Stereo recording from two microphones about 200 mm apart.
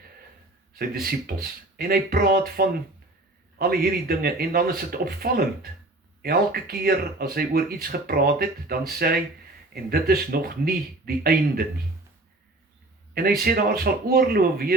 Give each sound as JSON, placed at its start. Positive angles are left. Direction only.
{"t": 1.0, "sound": "speech", "side_deg": -50}
{"t": 13.4, "sound": "speech", "side_deg": -50}